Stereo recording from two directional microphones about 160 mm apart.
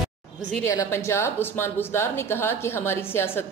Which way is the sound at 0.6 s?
15° left (ahead or behind).